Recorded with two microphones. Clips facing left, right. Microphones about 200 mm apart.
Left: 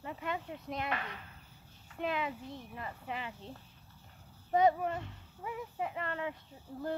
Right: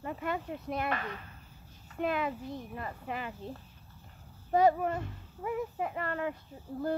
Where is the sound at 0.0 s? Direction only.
50° right (ahead or behind).